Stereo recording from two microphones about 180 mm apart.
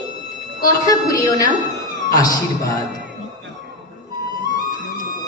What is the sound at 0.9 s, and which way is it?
A woman's voice, 20° left (ahead or behind).